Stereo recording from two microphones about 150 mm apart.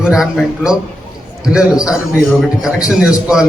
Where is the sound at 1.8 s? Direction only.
20° left (ahead or behind).